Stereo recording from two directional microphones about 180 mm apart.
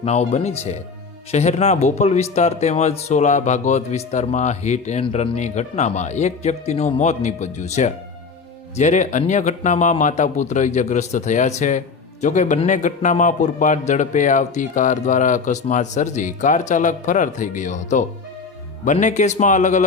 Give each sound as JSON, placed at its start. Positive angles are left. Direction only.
{"t": 0.0, "sound": "a man's voice", "side_deg": 40}